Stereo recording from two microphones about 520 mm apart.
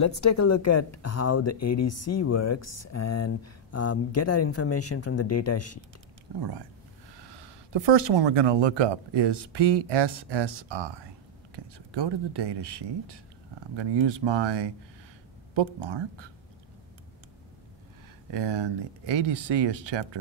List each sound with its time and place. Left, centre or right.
0.0 s speech: left
6.4 s speech: right
18.3 s speech: right